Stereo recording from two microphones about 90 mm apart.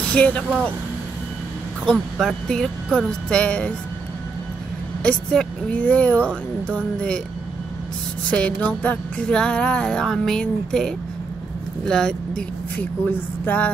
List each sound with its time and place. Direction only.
0.1 s music: 15° left (ahead or behind)
1.9 s music: 5° left (ahead or behind)
5.0 s music: 10° left (ahead or behind)
8.3 s music: 15° left (ahead or behind)
11.8 s speech: 5° left (ahead or behind)
12.7 s speech: 20° left (ahead or behind)